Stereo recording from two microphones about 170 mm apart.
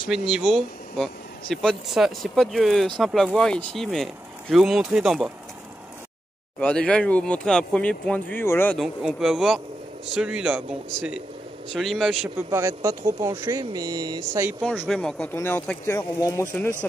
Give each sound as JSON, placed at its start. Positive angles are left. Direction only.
{"t": 0.3, "sound": "speech", "side_deg": -10}
{"t": 0.9, "sound": "speech", "side_deg": 5}
{"t": 6.6, "sound": "speech", "side_deg": 5}
{"t": 8.7, "sound": "speech", "side_deg": 0}
{"t": 12.4, "sound": "speech", "side_deg": -20}
{"t": 14.9, "sound": "speech", "side_deg": 5}